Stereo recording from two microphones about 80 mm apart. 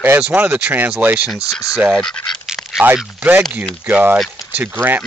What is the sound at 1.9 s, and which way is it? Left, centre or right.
Speech, centre.